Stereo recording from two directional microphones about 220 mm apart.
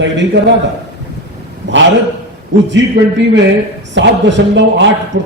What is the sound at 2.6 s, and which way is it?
A man's voice, 55° right (ahead or behind).